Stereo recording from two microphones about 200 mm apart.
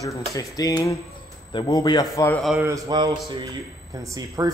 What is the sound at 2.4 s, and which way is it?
Speech, centre (ahead or behind).